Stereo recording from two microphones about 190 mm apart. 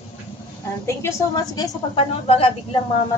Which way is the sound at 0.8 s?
15° left (ahead or behind).